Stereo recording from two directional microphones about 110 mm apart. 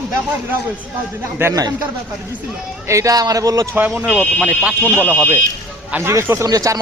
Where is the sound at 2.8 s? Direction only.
30° right (ahead or behind).